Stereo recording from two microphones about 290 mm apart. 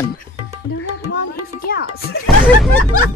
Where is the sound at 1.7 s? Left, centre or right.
Left.